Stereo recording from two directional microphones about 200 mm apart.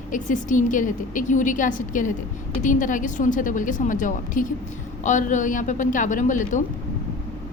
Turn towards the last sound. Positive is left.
turn(degrees=40)  # may be behind; listen again after turning